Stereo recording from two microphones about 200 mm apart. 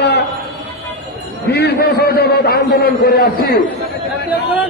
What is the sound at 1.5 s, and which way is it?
A man's voice, 55° left (ahead or behind).